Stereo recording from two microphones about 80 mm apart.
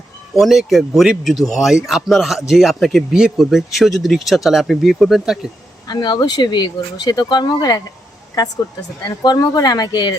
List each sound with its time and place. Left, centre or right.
0.3 s speech: centre
5.9 s speech: left
9.0 s speech: left